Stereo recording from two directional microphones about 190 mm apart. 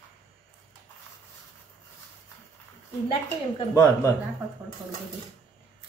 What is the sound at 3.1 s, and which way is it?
A woman's voice, 20° left (ahead or behind).